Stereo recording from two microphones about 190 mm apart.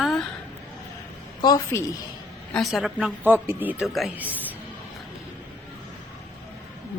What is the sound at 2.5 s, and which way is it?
A woman's voice, centre (ahead or behind).